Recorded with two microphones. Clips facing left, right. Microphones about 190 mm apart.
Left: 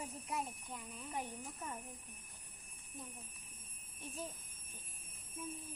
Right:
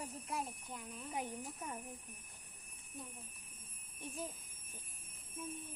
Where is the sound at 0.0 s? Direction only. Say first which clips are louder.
Even; centre (ahead or behind).